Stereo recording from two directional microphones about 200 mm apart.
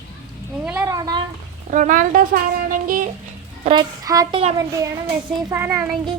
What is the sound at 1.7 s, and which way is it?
A woman's voice, 40° right (ahead or behind).